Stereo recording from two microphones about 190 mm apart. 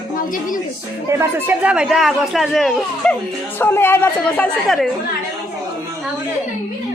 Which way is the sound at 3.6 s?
10° left (ahead or behind).